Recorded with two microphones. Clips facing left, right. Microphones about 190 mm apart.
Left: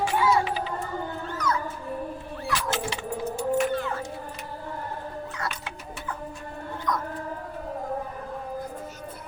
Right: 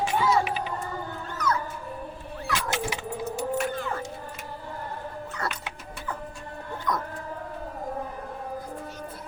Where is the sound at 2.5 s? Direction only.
15° right (ahead or behind).